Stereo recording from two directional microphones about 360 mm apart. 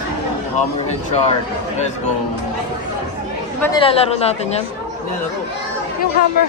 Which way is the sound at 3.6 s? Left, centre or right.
Centre.